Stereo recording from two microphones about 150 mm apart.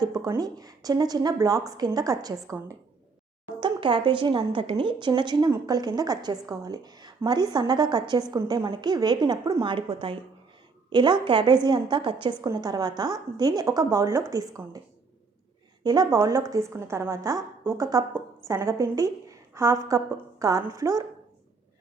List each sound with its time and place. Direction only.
0.0 s a woman's voice: 25° right (ahead or behind)
3.6 s a woman's voice: 35° right (ahead or behind)
15.8 s a woman's voice: 25° right (ahead or behind)